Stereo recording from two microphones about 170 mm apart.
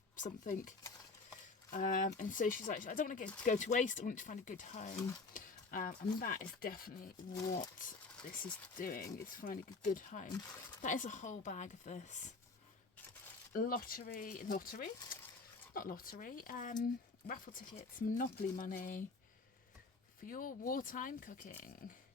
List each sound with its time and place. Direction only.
0.2 s speech: 50° left (ahead or behind)
1.7 s speech: 50° left (ahead or behind)
13.5 s speech: 55° left (ahead or behind)
20.2 s speech: 55° left (ahead or behind)